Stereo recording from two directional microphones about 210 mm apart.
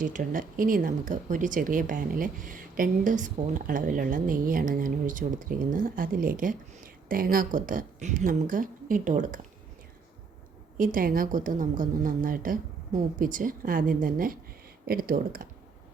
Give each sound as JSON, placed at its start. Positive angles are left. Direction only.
{"t": 0.0, "sound": "speech", "side_deg": -40}
{"t": 10.8, "sound": "speech", "side_deg": -40}